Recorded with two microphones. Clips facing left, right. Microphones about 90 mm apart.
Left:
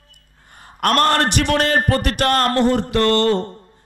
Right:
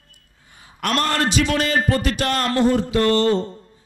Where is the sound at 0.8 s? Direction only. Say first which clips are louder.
Left 5 dB; 50° left (ahead or behind).